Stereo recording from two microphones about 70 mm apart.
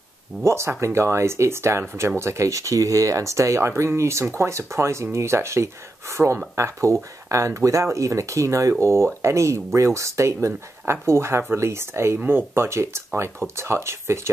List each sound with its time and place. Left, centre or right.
0.4 s speech: right
12.2 s speech: right